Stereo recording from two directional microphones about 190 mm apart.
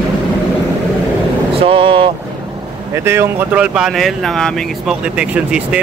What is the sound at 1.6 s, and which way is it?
Speech, 30° right (ahead or behind).